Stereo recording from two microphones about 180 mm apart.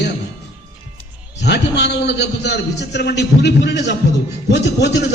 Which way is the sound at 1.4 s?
70° left (ahead or behind).